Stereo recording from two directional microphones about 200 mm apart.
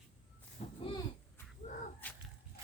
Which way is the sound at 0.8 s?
25° left (ahead or behind).